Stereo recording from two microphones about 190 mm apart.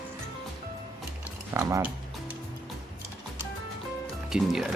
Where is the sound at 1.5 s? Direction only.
15° right (ahead or behind).